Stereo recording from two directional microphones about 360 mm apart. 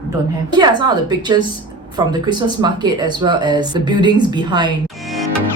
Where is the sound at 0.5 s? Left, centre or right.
Centre.